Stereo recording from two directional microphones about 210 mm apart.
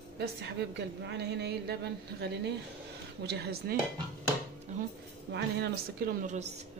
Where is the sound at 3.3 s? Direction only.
50° right (ahead or behind).